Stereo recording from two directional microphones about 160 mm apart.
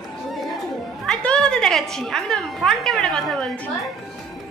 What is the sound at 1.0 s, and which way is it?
A woman's voice, 5° left (ahead or behind).